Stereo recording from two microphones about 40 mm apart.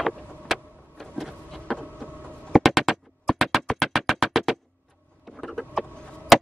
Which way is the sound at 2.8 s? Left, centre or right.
Centre.